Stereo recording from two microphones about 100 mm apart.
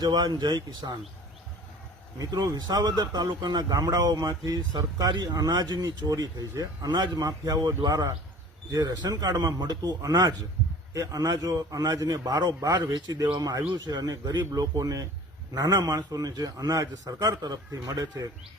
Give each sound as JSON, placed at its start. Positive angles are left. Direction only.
{"t": 0.0, "sound": "speech", "side_deg": -45}
{"t": 2.1, "sound": "a man's voice", "side_deg": -35}